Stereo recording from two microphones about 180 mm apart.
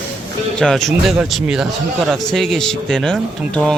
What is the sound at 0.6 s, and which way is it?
Speech, centre (ahead or behind).